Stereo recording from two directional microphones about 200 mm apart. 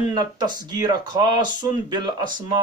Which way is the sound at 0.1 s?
20° right (ahead or behind).